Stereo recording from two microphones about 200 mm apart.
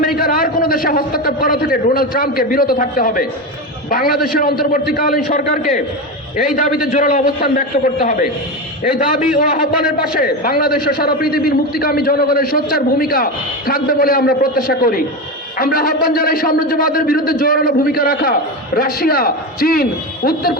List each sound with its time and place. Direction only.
0.2 s a man's voice: 45° left (ahead or behind)